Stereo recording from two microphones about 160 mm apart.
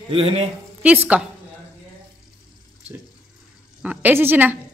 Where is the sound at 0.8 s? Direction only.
10° right (ahead or behind).